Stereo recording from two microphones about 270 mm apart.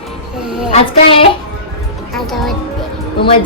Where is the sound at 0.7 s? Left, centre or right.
Centre.